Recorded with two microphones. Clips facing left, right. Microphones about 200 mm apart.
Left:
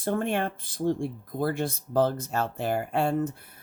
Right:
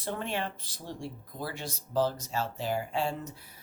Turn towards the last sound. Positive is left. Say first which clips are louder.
# left 7 dB
turn(degrees=55)  # may be behind; listen again after turning